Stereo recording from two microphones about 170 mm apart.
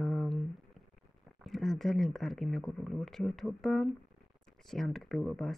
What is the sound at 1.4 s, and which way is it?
Speech, centre (ahead or behind).